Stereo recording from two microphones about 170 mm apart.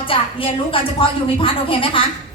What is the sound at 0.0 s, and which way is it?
A woman's voice, 30° left (ahead or behind).